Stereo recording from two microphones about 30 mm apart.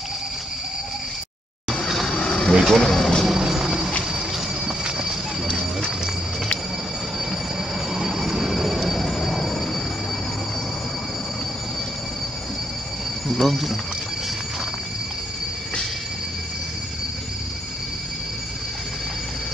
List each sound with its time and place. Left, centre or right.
2.0 s vehicle: left
2.6 s speech: centre
3.3 s vehicle: centre
4.8 s horse: right
7.9 s train: centre
13.3 s speech: centre